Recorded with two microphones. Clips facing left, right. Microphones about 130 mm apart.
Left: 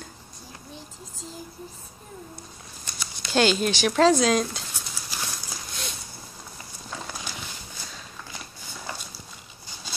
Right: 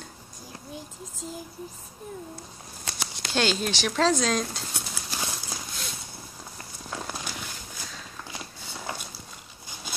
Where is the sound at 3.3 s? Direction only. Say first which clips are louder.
Left 5 dB; 5° left (ahead or behind).